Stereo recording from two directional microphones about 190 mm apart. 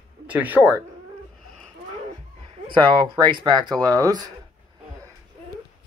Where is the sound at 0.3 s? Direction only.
10° right (ahead or behind).